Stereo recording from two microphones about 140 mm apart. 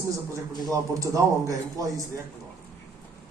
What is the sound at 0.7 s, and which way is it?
A man's voice, 25° right (ahead or behind).